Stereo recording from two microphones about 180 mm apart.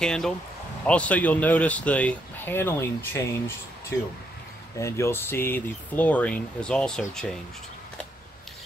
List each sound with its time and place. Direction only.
0.0 s speech: 5° left (ahead or behind)
4.7 s speech: 15° left (ahead or behind)